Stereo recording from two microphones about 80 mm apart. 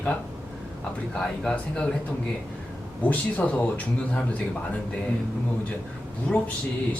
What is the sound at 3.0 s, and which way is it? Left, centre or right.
Speech, centre.